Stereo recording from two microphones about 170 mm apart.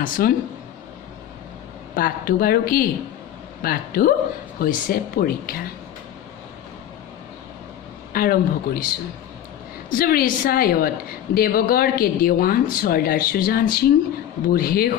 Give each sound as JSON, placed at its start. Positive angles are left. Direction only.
{"t": 0.0, "sound": "speech", "side_deg": 55}
{"t": 2.0, "sound": "a woman's voice", "side_deg": 55}
{"t": 8.1, "sound": "a woman's voice", "side_deg": 60}
{"t": 9.8, "sound": "a woman's voice", "side_deg": 60}